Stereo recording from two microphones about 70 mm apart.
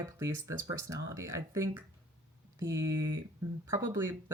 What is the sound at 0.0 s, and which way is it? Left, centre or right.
Speech, right.